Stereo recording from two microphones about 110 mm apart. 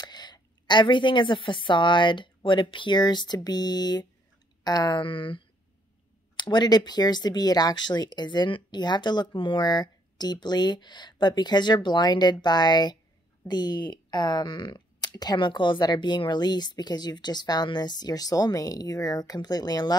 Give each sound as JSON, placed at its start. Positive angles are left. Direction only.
{"t": 0.0, "sound": "a woman's voice", "side_deg": 40}
{"t": 5.0, "sound": "speech", "side_deg": 50}